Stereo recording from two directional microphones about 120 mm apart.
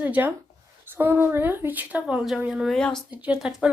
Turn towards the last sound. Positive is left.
turn(degrees=-5)  # may be behind; listen again after turning